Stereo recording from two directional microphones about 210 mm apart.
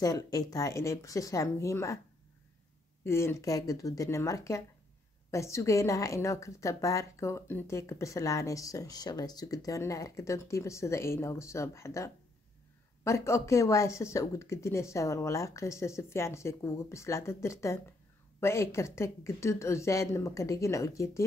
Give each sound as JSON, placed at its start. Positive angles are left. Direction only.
{"t": 0.0, "sound": "a woman's voice", "side_deg": 15}
{"t": 3.0, "sound": "a woman's voice", "side_deg": 10}